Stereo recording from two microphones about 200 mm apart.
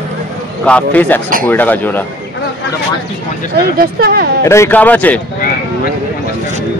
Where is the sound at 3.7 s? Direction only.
50° right (ahead or behind).